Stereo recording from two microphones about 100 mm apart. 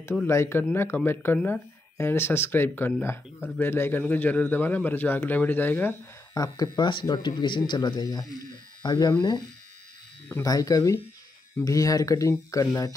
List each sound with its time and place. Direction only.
0.3 s speech: 25° left (ahead or behind)
6.3 s speech: 40° left (ahead or behind)
10.4 s speech: 35° left (ahead or behind)